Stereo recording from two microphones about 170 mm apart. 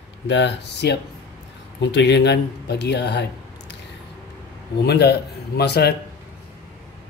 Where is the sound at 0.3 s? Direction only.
90° left.